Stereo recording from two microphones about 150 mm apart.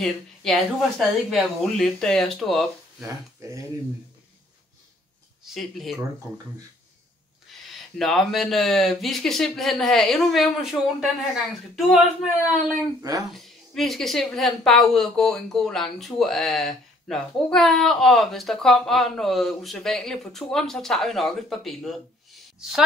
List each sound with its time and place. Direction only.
0.0 s a woman's voice: centre (ahead or behind)
3.0 s speech: 20° right (ahead or behind)
5.4 s speech: centre (ahead or behind)
8.0 s a woman's voice: centre (ahead or behind)